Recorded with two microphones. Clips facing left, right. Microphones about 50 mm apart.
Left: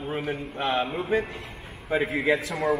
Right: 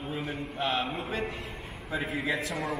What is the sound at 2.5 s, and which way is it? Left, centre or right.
Speech, centre.